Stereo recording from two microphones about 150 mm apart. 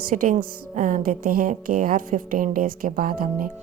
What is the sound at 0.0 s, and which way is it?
Speech, 70° right (ahead or behind).